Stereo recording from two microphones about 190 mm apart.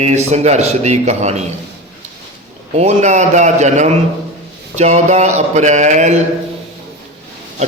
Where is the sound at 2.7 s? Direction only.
35° right (ahead or behind).